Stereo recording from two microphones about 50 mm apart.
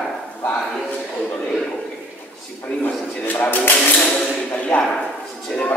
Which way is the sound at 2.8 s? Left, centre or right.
Left.